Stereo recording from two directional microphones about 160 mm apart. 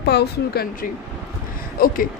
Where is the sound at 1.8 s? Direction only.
65° left (ahead or behind).